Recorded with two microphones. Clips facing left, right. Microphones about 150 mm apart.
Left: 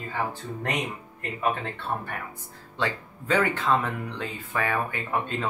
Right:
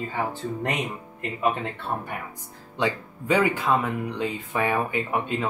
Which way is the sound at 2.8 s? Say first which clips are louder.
Right 3 dB; 10° right (ahead or behind).